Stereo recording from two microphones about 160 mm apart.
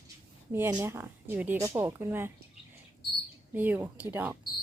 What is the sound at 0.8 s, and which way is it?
Speech, 15° right (ahead or behind).